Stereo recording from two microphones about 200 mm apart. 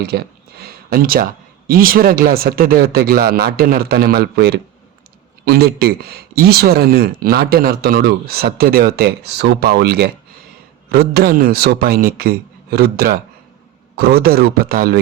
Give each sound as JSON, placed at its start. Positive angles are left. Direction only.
{"t": 0.0, "sound": "speech", "side_deg": -50}